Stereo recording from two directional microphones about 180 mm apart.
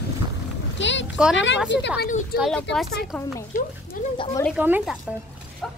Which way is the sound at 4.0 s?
50° left (ahead or behind).